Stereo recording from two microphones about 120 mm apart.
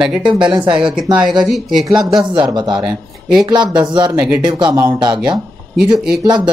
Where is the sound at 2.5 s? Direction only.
40° right (ahead or behind).